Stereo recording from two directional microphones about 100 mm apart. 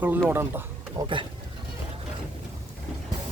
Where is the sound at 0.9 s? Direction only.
55° right (ahead or behind).